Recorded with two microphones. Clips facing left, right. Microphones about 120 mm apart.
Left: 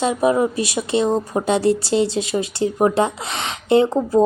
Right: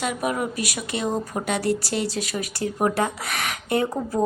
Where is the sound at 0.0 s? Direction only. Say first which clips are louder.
Left 8 dB; 30° left (ahead or behind).